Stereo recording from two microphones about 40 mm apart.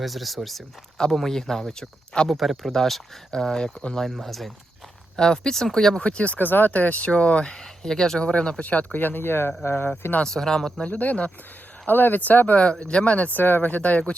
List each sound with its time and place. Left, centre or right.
0.0 s speech: centre
0.9 s speech: centre
5.1 s speech: centre
6.0 s speech: left
6.4 s speech: left
6.7 s speech: left
7.0 s speech: left
7.5 s speech: centre
8.2 s speech: left
10.2 s speech: centre
10.8 s speech: left
11.9 s speech: left
12.9 s speech: left
13.4 s speech: left